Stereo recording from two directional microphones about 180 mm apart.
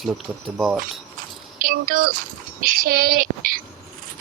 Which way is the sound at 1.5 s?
50° right (ahead or behind).